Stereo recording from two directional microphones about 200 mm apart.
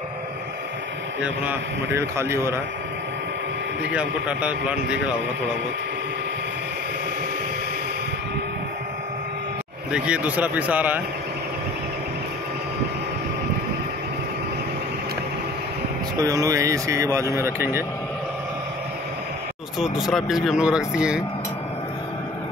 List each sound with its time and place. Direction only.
1.2 s speech: 10° right (ahead or behind)
3.9 s speech: 5° right (ahead or behind)
9.9 s speech: 5° right (ahead or behind)
16.2 s speech: 15° right (ahead or behind)
19.8 s speech: centre (ahead or behind)